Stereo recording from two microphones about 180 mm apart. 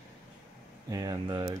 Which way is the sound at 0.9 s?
20° right (ahead or behind).